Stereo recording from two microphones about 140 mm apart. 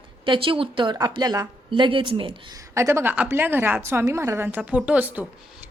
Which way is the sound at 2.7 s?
20° right (ahead or behind).